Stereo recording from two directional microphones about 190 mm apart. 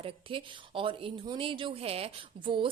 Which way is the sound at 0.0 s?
25° right (ahead or behind).